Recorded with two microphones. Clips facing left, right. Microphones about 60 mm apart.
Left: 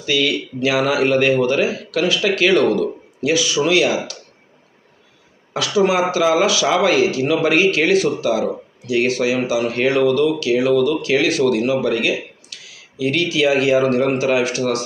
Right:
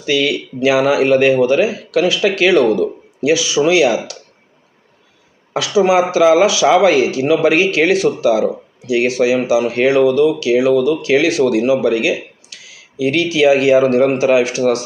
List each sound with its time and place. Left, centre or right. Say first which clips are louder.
0.0 s speech: right 3 dB; right
3.9 s speech: right 3 dB; left
5.7 s speech: right 4 dB; right